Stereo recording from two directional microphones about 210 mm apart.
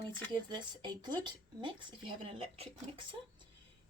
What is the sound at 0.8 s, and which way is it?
Speech, 20° right (ahead or behind).